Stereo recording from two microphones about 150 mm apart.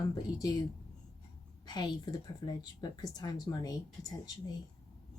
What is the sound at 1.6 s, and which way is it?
Speech, 25° left (ahead or behind).